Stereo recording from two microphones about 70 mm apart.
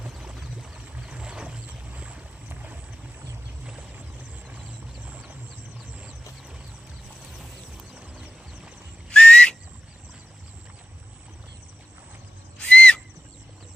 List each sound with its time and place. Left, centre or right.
0.0 s a sound: centre
2.5 s boat: right
5.0 s a sound: right
7.9 s music: centre
9.0 s whistle: centre
12.5 s whistle: centre